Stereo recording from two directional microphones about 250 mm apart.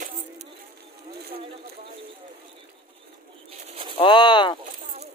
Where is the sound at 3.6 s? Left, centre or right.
Right.